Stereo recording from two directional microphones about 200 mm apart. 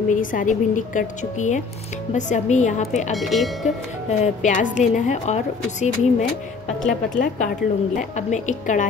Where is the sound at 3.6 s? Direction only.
35° left (ahead or behind).